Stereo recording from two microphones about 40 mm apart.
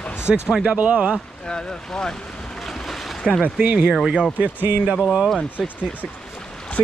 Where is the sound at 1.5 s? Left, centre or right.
Centre.